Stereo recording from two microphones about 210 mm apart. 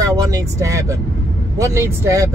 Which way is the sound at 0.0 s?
15° right (ahead or behind).